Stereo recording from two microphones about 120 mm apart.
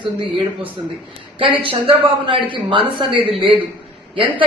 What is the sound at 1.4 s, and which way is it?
Speech, 45° right (ahead or behind).